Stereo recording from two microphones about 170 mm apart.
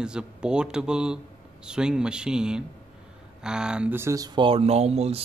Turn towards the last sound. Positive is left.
turn(degrees=-40)  # may be behind; listen again after turning